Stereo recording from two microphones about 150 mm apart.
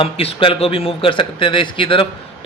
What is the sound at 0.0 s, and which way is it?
A man's voice, 40° left (ahead or behind).